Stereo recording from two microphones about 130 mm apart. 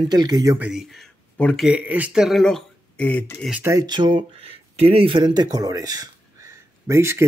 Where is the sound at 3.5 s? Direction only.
20° right (ahead or behind).